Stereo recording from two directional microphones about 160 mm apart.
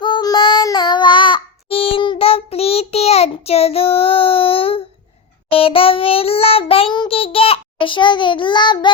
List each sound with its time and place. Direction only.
0.0 s child singing: 30° left (ahead or behind)